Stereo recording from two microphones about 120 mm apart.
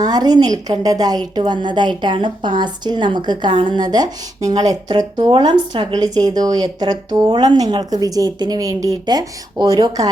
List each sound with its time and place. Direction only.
0.0 s a woman's voice: 35° right (ahead or behind)